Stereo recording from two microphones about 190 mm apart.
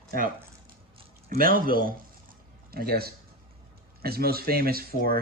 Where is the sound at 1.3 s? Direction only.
50° right (ahead or behind).